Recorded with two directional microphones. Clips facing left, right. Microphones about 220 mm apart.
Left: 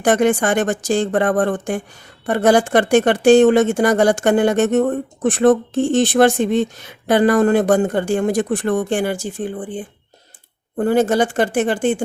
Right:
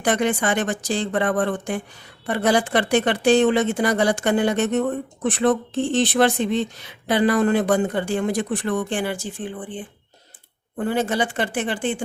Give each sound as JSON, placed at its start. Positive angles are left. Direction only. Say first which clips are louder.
{"t": 0.0, "sound": "speech", "louder": "left 6 dB", "side_deg": 45}